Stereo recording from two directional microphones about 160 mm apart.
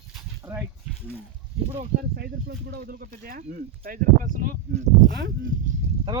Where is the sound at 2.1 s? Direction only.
85° right; by 5.1 s 60° right (ahead or behind).